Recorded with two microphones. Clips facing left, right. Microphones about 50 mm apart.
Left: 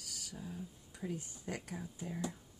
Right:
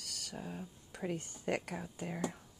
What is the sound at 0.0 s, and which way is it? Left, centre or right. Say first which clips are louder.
Speech: right 3 dB; right.